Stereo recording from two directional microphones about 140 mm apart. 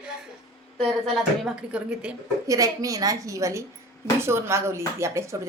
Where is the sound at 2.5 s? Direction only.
25° right (ahead or behind).